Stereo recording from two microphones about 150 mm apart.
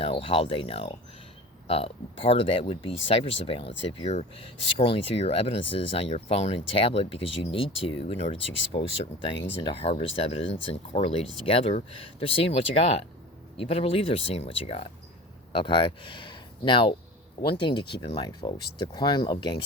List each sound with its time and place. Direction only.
0.0 s speech: 40° left (ahead or behind)
18.3 s speech: 25° left (ahead or behind)